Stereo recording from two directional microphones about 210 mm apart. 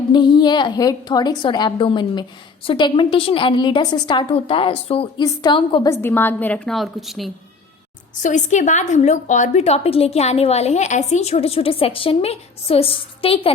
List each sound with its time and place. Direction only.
0.1 s a woman's voice: 20° left (ahead or behind)
5.9 s a woman's voice: 10° left (ahead or behind)
8.2 s a woman's voice: 35° left (ahead or behind)